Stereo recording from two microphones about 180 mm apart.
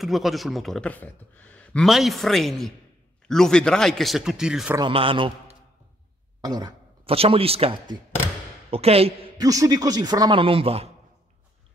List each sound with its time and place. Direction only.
0.0 s speech: centre (ahead or behind)
4.7 s a man's voice: 30° right (ahead or behind)
7.1 s a man's voice: 30° right (ahead or behind)
9.4 s a man's voice: 20° right (ahead or behind)